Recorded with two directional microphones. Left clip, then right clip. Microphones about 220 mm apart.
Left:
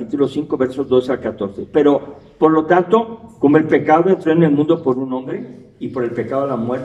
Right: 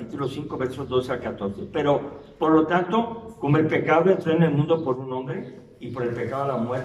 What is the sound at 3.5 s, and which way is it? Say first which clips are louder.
A man's voice: left 6 dB; 45° left (ahead or behind).